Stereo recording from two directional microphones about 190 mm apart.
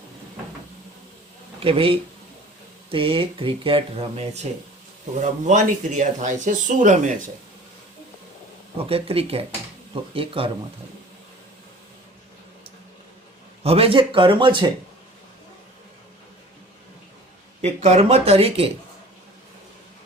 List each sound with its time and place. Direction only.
1.5 s speech: 30° right (ahead or behind)
8.9 s speech: 30° right (ahead or behind)
13.6 s speech: 30° right (ahead or behind)
17.6 s speech: 35° right (ahead or behind)